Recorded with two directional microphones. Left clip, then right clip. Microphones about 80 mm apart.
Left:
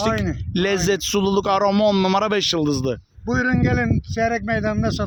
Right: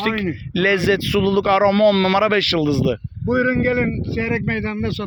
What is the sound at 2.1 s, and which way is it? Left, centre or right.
Speech, left.